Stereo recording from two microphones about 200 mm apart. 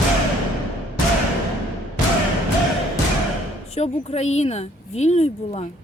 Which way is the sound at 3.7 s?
30° left (ahead or behind).